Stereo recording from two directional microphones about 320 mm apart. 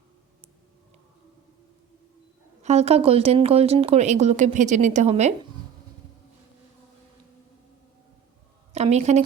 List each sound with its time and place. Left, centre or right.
2.6 s speech: right
8.7 s a woman's voice: right